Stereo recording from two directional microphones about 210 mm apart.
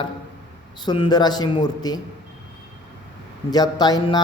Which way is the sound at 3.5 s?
20° left (ahead or behind).